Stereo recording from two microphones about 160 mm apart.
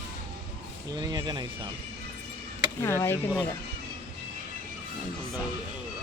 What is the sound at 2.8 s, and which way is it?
Speech, 15° left (ahead or behind).